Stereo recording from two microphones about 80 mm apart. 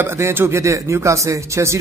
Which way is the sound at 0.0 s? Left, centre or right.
Right.